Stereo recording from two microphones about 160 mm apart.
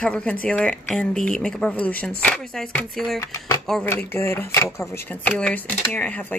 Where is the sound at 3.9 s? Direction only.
15° left (ahead or behind).